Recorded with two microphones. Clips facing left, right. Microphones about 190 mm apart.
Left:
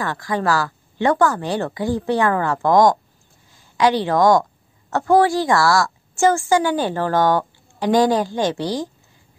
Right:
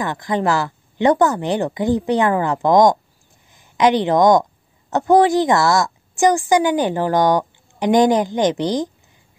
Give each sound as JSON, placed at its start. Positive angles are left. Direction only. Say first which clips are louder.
{"t": 0.0, "sound": "a woman's voice", "louder": "right 2 dB", "side_deg": -20}